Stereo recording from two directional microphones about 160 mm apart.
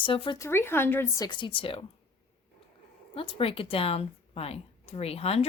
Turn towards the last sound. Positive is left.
turn(degrees=40)  # may be behind; listen again after turning